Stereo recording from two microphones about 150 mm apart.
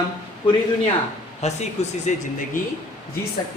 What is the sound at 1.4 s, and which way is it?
Speech, 50° left (ahead or behind).